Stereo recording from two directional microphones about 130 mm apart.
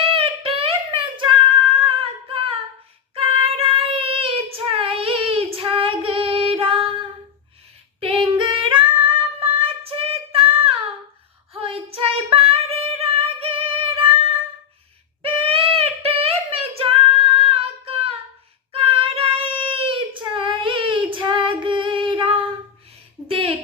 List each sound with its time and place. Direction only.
0.1 s a sound: 45° right (ahead or behind)
1.8 s singing: 45° right (ahead or behind)
3.2 s child singing: 45° right (ahead or behind)
8.0 s singing: 40° right (ahead or behind)
11.5 s female singing: 50° right (ahead or behind)
15.2 s child singing: 45° right (ahead or behind)
23.3 s a sound: 45° right (ahead or behind)